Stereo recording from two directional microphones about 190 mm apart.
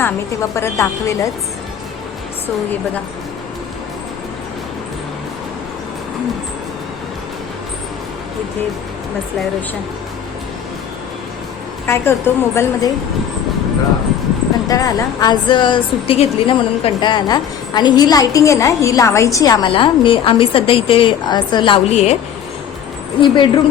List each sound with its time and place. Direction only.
0.0 s a woman's voice: 15° left (ahead or behind)
11.9 s a woman's voice: 10° left (ahead or behind)
14.7 s a woman's voice: 20° left (ahead or behind); by 22.1 s 35° left (ahead or behind)
23.2 s a woman's voice: 25° left (ahead or behind)